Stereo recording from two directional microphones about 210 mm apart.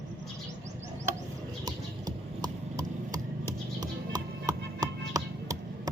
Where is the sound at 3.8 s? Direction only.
20° right (ahead or behind).